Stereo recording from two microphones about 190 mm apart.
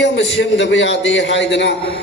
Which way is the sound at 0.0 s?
70° left (ahead or behind).